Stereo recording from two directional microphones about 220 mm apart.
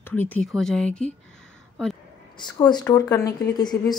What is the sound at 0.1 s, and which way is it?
Speech, 5° left (ahead or behind).